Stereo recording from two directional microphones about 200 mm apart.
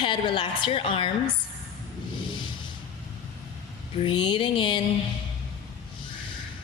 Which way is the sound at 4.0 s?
25° left (ahead or behind).